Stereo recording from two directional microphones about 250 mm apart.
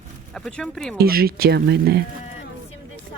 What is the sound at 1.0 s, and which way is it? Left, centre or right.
Speech, right.